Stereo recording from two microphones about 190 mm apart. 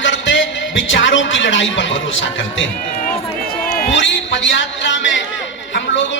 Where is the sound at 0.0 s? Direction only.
75° left (ahead or behind).